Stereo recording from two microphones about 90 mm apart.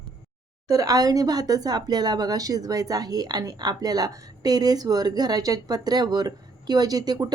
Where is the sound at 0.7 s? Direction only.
40° right (ahead or behind).